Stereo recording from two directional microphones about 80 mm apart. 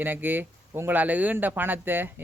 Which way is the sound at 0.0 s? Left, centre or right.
Right.